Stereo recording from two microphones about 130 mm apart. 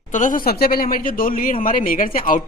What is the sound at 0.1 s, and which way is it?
A woman's voice, 85° left.